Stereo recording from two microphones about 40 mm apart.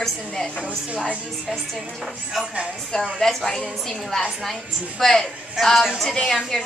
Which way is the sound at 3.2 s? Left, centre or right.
Centre.